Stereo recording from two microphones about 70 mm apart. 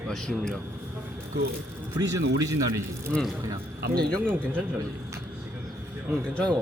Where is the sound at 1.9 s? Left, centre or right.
Right.